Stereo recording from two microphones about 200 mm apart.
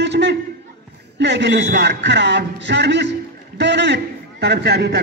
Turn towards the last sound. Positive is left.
turn(degrees=-55)  # may be behind; listen again after turning